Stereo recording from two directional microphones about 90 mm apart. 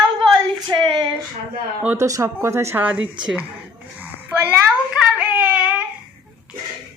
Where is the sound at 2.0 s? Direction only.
35° right (ahead or behind).